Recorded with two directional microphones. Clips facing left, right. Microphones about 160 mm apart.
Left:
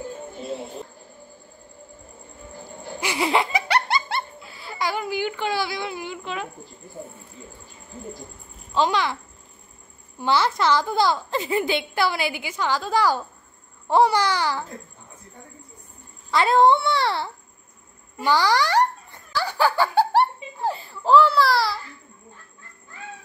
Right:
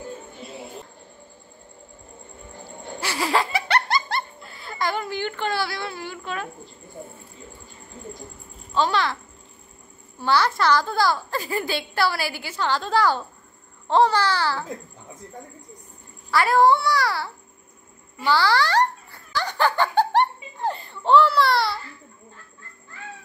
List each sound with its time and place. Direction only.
3.0 s laughter: 20° left (ahead or behind)
8.7 s babbling: 15° left (ahead or behind)
10.2 s a woman's voice: 20° left (ahead or behind)
13.8 s babbling: 10° left (ahead or behind)
16.3 s a woman's voice: 20° left (ahead or behind)
18.2 s giggle: 15° left (ahead or behind); by 21.7 s centre (ahead or behind)